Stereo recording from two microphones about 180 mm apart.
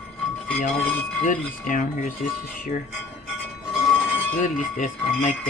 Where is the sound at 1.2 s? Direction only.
45° left (ahead or behind).